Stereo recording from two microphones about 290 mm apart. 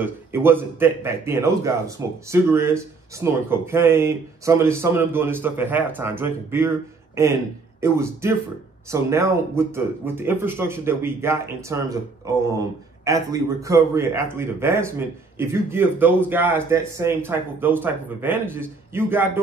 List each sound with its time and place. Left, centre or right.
0.0 s speech: centre